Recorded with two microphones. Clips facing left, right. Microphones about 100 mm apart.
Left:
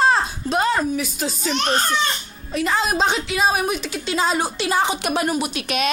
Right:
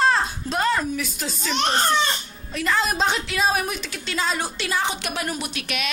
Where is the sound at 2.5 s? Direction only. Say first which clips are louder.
Left 2 dB; 15° left (ahead or behind).